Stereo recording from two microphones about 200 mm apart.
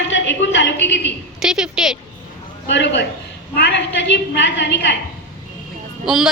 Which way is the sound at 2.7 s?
60° left (ahead or behind).